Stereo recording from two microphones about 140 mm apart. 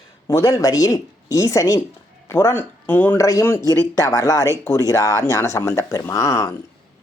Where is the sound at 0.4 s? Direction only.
25° left (ahead or behind).